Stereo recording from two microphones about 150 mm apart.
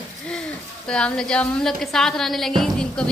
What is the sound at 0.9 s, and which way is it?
A woman's voice, 5° left (ahead or behind).